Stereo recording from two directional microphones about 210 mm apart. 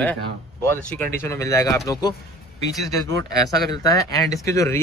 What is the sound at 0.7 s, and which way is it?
Speech, 10° left (ahead or behind).